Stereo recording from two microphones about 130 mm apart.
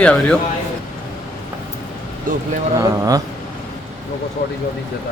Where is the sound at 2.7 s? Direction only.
25° right (ahead or behind).